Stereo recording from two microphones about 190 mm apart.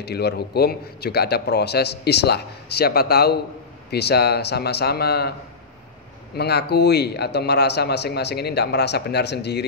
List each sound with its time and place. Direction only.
0.0 s a man's voice: 60° left (ahead or behind)
6.3 s a man's voice: 60° left (ahead or behind)